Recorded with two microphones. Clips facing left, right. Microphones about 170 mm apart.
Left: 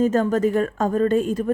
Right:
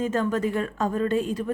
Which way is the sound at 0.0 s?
40° left (ahead or behind).